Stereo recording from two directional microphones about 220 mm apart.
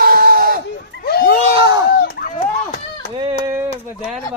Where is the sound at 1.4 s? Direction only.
25° right (ahead or behind).